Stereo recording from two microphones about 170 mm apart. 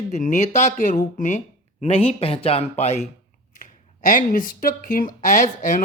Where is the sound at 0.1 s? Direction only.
45° left (ahead or behind).